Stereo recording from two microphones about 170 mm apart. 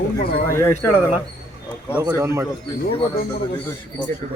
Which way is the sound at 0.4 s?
15° left (ahead or behind).